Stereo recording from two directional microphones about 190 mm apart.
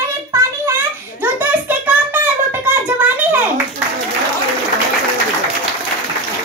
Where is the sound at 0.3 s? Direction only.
15° right (ahead or behind).